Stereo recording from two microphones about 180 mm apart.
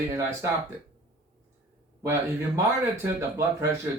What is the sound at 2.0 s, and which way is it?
Speech, 15° right (ahead or behind).